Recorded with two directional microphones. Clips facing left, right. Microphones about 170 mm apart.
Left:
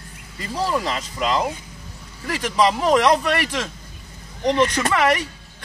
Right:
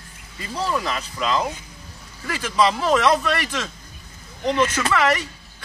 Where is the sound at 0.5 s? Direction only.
10° left (ahead or behind).